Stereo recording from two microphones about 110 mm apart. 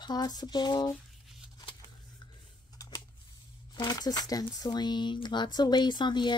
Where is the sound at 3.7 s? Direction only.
35° left (ahead or behind).